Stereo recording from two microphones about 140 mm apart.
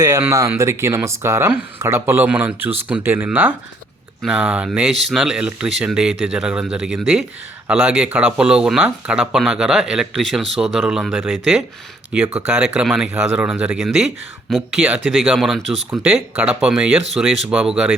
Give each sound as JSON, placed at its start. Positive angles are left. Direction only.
{"t": 0.0, "sound": "speech", "side_deg": -20}